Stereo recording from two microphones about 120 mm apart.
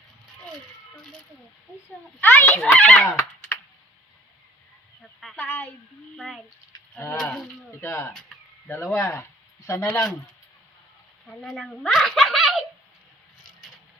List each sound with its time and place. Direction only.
2.2 s a child's voice: 15° left (ahead or behind)
3.1 s fowl: 25° left (ahead or behind)
5.4 s a child's voice: 15° left (ahead or behind)
6.1 s speech: centre (ahead or behind)
6.7 s a sound: 30° left (ahead or behind)
7.8 s speech: 20° left (ahead or behind)
11.3 s speech: 5° left (ahead or behind)
11.9 s a sound: centre (ahead or behind)